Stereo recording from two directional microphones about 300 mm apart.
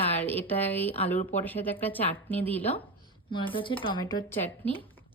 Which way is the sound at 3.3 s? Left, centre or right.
Centre.